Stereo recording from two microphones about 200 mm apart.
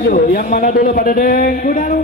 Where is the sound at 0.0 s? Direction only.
50° left (ahead or behind).